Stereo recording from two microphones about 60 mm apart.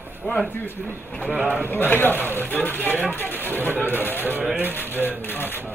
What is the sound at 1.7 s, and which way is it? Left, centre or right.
Speech, left.